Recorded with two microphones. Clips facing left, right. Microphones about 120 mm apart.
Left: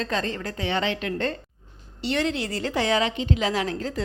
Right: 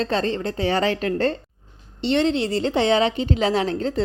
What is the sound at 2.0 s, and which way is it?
A woman's voice, 25° right (ahead or behind).